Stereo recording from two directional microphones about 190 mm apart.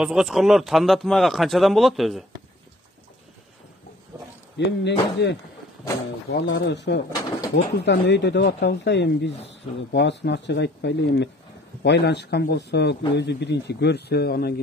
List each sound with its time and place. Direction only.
0.0 s a man's voice: 5° right (ahead or behind)
4.6 s a man's voice: 65° left (ahead or behind)